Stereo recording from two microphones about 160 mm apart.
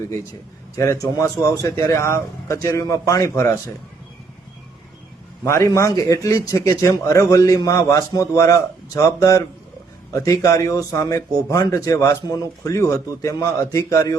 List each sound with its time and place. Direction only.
0.8 s a man's voice: 20° left (ahead or behind)
5.5 s a man's voice: 20° left (ahead or behind)